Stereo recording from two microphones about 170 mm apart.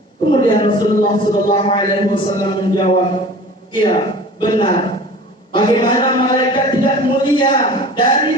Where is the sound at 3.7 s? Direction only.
30° left (ahead or behind).